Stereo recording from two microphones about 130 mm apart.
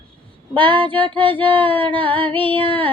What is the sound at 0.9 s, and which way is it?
Female singing, 40° right (ahead or behind).